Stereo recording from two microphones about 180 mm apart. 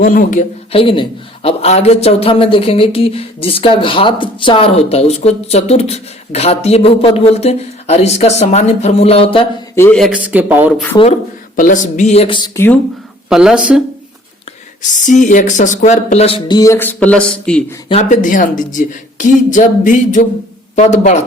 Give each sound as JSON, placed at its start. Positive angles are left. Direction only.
{"t": 0.0, "sound": "a woman's voice", "side_deg": 50}
{"t": 0.7, "sound": "a man's voice", "side_deg": 30}
{"t": 9.7, "sound": "speech", "side_deg": 15}
{"t": 10.0, "sound": "speech", "side_deg": -5}
{"t": 10.9, "sound": "a man's voice", "side_deg": 35}
{"t": 11.5, "sound": "a man's voice", "side_deg": 45}
{"t": 12.5, "sound": "speech", "side_deg": 10}
{"t": 13.3, "sound": "speech", "side_deg": -5}
{"t": 14.8, "sound": "a woman's voice", "side_deg": 45}
{"t": 16.6, "sound": "speech", "side_deg": 15}
{"t": 18.1, "sound": "a woman's voice", "side_deg": 45}